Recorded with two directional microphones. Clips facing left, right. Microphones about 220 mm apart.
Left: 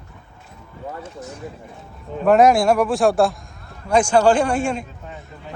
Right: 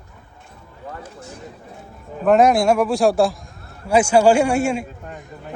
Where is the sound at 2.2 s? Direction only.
Centre (ahead or behind).